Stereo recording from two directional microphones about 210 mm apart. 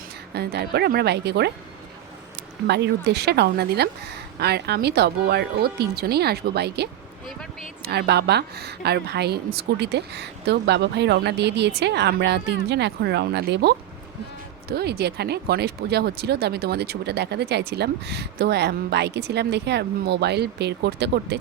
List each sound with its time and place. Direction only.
0.3 s speech: 50° right (ahead or behind)
2.6 s speech: 55° right (ahead or behind)